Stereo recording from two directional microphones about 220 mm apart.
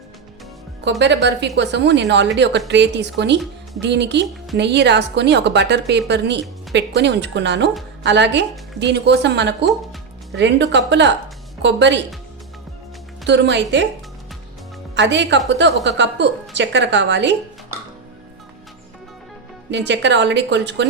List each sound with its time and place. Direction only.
0.9 s a woman's voice: 50° right (ahead or behind)
13.2 s a woman's voice: 55° right (ahead or behind)
14.9 s a woman's voice: 55° right (ahead or behind)
19.7 s a woman's voice: 55° right (ahead or behind)